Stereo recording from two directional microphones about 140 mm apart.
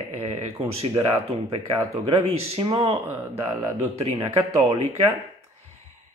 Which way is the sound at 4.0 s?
45° right (ahead or behind).